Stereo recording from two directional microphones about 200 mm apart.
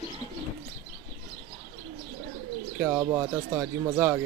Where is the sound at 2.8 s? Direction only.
15° right (ahead or behind).